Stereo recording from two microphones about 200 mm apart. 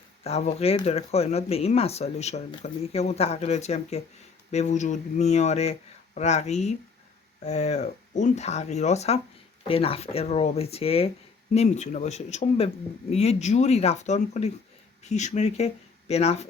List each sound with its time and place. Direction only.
0.3 s speech: 30° left (ahead or behind)